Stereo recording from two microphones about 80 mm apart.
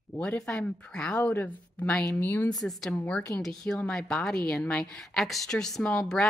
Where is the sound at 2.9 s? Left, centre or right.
Centre.